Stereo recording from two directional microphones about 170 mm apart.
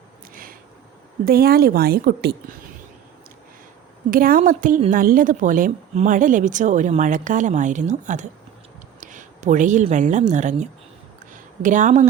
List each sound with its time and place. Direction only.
1.2 s a woman's voice: 65° right (ahead or behind)
4.1 s a woman's voice: 55° right (ahead or behind)